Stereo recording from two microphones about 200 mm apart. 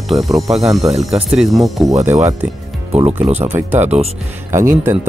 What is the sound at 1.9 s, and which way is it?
Speech, 35° right (ahead or behind).